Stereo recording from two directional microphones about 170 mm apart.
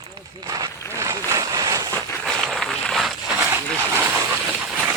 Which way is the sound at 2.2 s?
Centre (ahead or behind).